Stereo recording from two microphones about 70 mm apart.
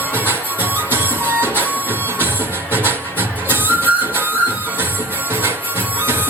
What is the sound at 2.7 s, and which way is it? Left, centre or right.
Music, right.